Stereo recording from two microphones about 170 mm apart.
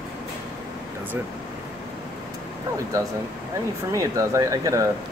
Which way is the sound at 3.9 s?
20° right (ahead or behind).